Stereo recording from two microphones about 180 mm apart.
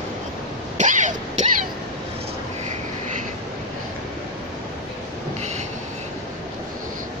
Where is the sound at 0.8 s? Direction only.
45° right (ahead or behind).